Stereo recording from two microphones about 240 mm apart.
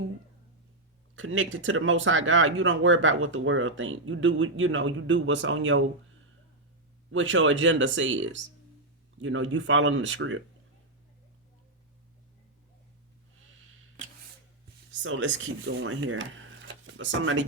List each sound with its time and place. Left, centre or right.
1.1 s speech: right
7.1 s speech: right
15.0 s speech: right